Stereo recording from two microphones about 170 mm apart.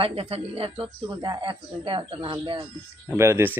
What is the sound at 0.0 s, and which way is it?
Speech, 35° right (ahead or behind).